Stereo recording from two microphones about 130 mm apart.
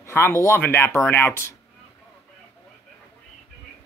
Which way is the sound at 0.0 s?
20° left (ahead or behind).